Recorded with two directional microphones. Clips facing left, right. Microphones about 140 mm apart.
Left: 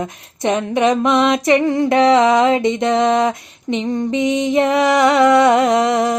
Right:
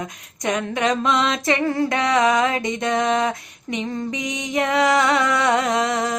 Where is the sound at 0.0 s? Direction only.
25° left (ahead or behind).